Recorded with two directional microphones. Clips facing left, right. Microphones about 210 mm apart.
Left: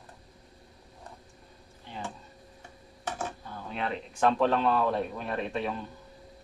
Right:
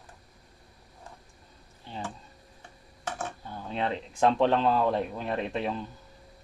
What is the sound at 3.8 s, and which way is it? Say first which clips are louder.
Speech: right 2 dB; 30° right (ahead or behind).